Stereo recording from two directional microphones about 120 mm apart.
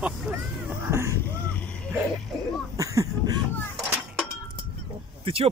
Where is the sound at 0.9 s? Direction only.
25° right (ahead or behind).